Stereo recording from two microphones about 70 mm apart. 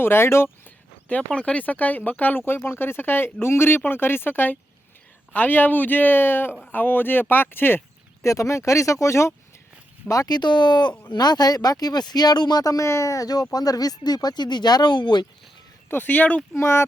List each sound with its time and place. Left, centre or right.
0.0 s speech: left
1.0 s speech: centre
8.2 s speech: left
10.1 s speech: left
11.1 s speech: left
15.9 s speech: left
16.6 s speech: left